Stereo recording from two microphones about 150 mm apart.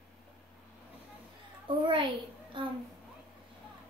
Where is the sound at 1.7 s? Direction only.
35° right (ahead or behind).